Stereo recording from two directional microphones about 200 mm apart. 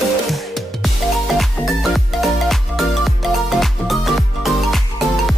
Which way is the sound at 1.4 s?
Centre (ahead or behind).